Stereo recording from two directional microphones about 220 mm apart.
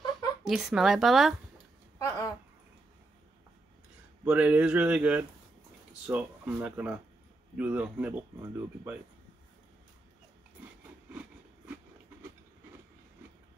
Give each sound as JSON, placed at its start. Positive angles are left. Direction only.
{"t": 0.4, "sound": "speech", "side_deg": 0}
{"t": 2.0, "sound": "a sound", "side_deg": 15}
{"t": 4.2, "sound": "speech", "side_deg": -5}